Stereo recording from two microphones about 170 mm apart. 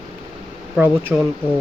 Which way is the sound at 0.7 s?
10° right (ahead or behind).